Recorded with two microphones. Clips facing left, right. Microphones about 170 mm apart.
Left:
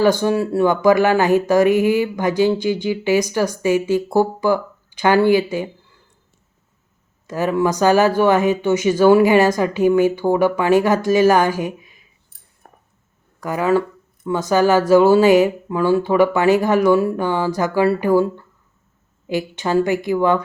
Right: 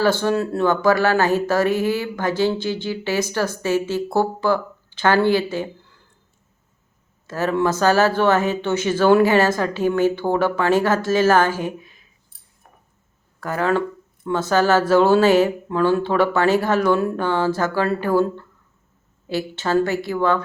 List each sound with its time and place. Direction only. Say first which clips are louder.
0.0 s speech: left 3 dB; 15° left (ahead or behind)
7.3 s speech: left 2 dB; 15° left (ahead or behind)
12.6 s a sound: left 4 dB; 50° left (ahead or behind)
13.4 s speech: left 3 dB; 10° left (ahead or behind)